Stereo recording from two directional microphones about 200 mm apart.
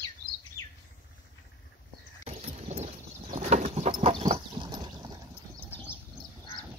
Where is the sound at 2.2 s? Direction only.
30° right (ahead or behind).